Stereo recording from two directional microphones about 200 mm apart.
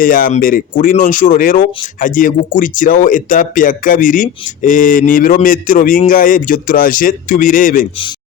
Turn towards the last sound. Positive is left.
turn(degrees=45)  # may be behind; listen again after turning